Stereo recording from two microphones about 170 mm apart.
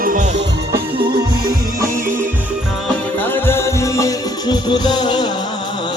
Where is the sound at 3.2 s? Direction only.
10° left (ahead or behind).